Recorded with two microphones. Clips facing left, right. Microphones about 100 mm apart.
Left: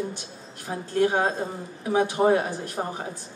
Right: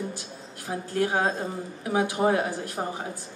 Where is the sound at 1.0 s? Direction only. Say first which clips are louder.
Left 3 dB; 25° left (ahead or behind).